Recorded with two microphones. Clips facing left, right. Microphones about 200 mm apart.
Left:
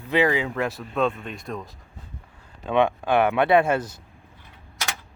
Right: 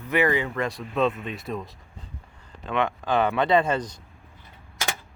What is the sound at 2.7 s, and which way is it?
Speech, 15° left (ahead or behind).